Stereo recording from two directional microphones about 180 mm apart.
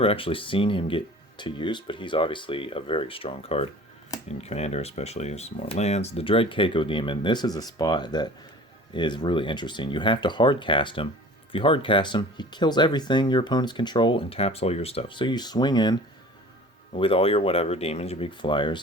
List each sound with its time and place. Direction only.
0.0 s speech: 30° left (ahead or behind)